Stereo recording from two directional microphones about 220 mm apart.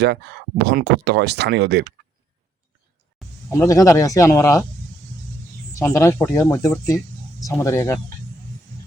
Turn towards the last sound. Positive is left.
turn(degrees=10)  # may be behind; listen again after turning